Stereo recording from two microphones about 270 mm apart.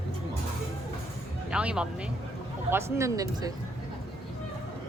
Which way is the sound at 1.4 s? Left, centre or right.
Centre.